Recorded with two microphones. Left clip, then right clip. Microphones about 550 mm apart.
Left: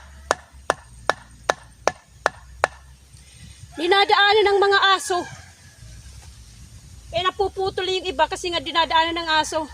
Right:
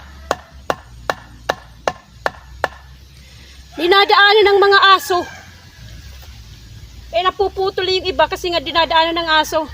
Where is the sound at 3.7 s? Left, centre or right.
Left.